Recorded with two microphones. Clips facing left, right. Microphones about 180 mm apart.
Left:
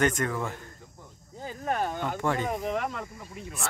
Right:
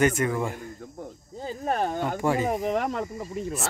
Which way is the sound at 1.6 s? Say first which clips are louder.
Right 3 dB; 35° right (ahead or behind).